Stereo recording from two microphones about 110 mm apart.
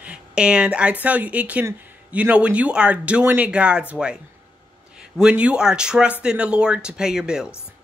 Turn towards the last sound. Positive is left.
turn(degrees=-5)  # may be behind; listen again after turning